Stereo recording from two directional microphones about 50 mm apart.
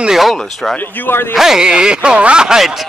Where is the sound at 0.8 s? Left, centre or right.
Left.